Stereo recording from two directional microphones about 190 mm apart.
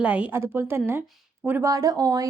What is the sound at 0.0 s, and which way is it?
A woman's voice, 5° right (ahead or behind).